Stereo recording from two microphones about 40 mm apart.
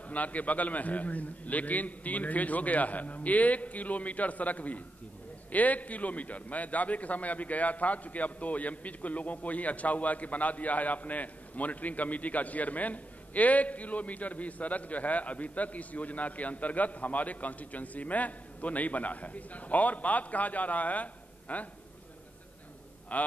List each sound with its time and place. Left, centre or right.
0.1 s a man's voice: left
23.1 s a man's voice: left